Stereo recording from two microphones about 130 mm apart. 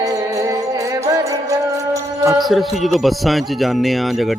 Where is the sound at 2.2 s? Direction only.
25° right (ahead or behind).